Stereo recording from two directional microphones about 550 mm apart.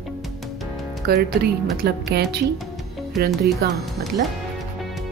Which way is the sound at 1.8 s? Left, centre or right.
Centre.